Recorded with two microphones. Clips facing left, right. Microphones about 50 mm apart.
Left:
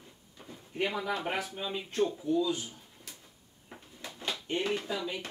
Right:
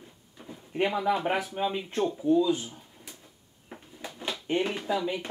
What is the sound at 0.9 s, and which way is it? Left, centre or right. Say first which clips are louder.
Speech: right 7 dB; centre.